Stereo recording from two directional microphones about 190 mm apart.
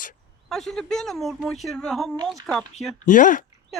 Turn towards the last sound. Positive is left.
turn(degrees=45)  # may be behind; listen again after turning